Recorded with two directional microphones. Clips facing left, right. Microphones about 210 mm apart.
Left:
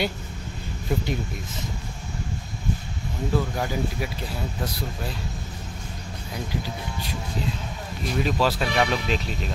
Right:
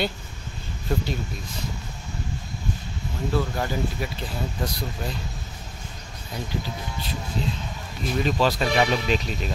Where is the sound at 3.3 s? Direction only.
10° left (ahead or behind).